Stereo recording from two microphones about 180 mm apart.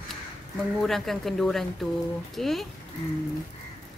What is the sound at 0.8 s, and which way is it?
A woman's voice, centre (ahead or behind).